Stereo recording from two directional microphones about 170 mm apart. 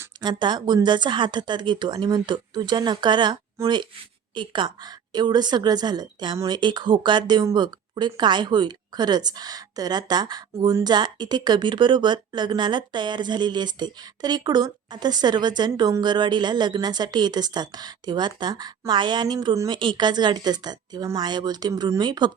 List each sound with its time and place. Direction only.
0.2 s a woman's voice: 25° right (ahead or behind)